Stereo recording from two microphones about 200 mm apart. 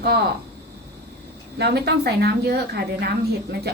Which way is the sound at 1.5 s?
55° right (ahead or behind).